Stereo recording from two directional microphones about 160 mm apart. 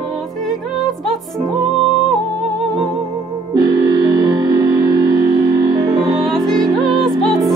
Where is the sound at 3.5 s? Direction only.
25° right (ahead or behind).